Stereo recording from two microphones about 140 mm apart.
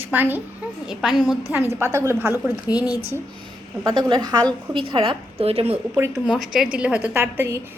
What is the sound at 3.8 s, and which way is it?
A woman's voice, 30° right (ahead or behind).